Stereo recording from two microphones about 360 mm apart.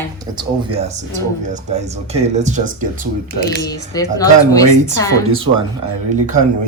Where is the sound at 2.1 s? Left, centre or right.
Centre.